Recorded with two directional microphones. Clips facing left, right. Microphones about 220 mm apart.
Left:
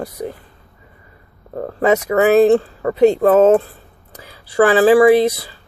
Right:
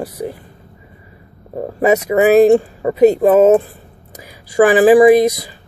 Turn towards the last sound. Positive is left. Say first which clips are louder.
# right 2 dB
turn(degrees=-15)  # may be behind; listen again after turning